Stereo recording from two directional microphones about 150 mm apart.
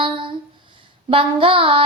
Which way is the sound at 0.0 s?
35° right (ahead or behind).